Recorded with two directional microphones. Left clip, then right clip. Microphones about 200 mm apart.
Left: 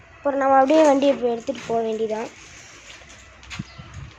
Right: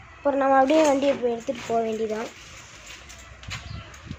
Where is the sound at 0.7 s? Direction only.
20° left (ahead or behind).